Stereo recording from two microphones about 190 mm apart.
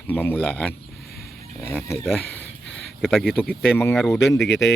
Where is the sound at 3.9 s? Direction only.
Centre (ahead or behind).